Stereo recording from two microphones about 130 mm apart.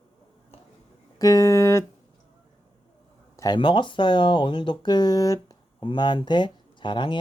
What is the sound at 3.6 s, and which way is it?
Speech, 40° left (ahead or behind).